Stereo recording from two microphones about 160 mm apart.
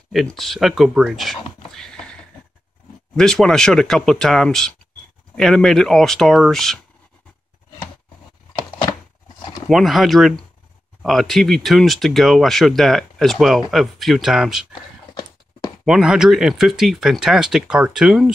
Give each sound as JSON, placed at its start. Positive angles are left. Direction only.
{"t": 0.1, "sound": "speech", "side_deg": 0}
{"t": 3.2, "sound": "speech", "side_deg": 5}
{"t": 9.7, "sound": "speech", "side_deg": 0}
{"t": 14.7, "sound": "a sound", "side_deg": 30}
{"t": 15.8, "sound": "speech", "side_deg": -5}